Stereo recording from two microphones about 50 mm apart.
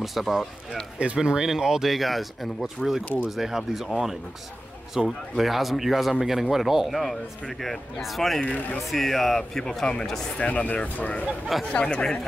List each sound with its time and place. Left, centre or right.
0.0 s speech: centre
0.9 s speech: centre
8.5 s speech: left
8.9 s speech: centre
10.4 s speech: left